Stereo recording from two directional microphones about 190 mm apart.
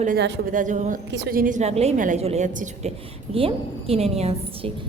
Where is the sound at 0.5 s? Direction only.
40° right (ahead or behind).